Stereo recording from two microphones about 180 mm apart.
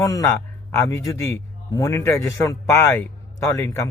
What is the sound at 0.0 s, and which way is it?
A man's voice, 15° left (ahead or behind).